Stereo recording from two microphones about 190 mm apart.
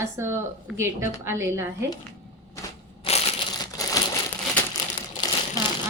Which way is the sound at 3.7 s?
20° left (ahead or behind).